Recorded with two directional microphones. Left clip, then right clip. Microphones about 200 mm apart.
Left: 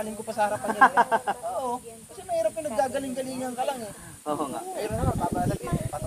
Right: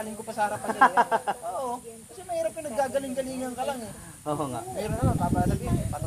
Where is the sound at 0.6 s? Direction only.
15° right (ahead or behind).